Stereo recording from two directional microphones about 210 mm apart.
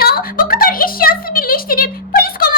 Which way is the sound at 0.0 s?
45° left (ahead or behind).